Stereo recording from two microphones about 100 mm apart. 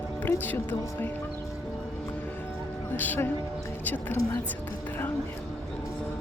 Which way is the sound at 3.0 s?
20° left (ahead or behind).